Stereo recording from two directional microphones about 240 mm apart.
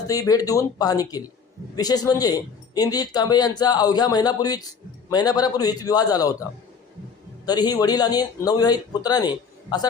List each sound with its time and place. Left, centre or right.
0.1 s a man's voice: centre